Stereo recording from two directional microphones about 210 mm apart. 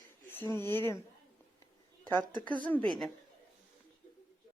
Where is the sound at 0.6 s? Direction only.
10° left (ahead or behind).